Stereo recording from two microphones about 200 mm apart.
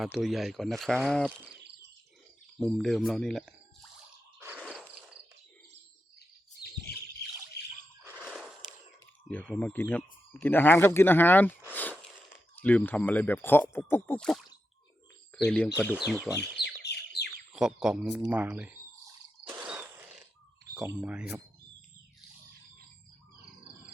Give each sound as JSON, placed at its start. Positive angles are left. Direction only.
{"t": 0.0, "sound": "speech", "side_deg": 0}
{"t": 2.6, "sound": "speech", "side_deg": 0}
{"t": 4.4, "sound": "a sound", "side_deg": -10}
{"t": 6.1, "sound": "bird", "side_deg": 50}
{"t": 8.0, "sound": "a sound", "side_deg": -5}
{"t": 9.3, "sound": "speech", "side_deg": 10}
{"t": 11.7, "sound": "a sound", "side_deg": 10}
{"t": 12.5, "sound": "speech", "side_deg": 10}
{"t": 16.4, "sound": "bird", "side_deg": 55}
{"t": 17.5, "sound": "speech", "side_deg": -5}
{"t": 19.5, "sound": "a sound", "side_deg": -10}
{"t": 21.0, "sound": "speech", "side_deg": -5}